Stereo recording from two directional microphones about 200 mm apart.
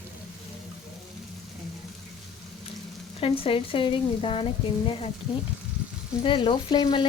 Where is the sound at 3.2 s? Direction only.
25° left (ahead or behind).